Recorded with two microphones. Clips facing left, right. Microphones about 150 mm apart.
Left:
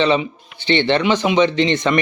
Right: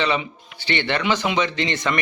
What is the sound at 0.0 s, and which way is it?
Speech, 25° left (ahead or behind).